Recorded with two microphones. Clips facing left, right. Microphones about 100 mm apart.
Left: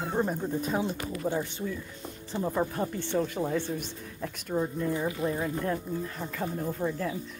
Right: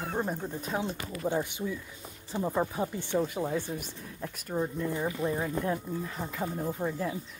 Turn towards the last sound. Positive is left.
turn(degrees=-10)  # may be behind; listen again after turning